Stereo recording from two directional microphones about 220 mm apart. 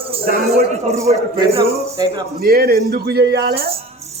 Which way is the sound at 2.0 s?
15° right (ahead or behind).